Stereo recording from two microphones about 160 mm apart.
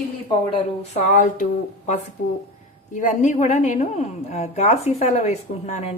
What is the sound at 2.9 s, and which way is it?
A woman's voice, 50° left (ahead or behind).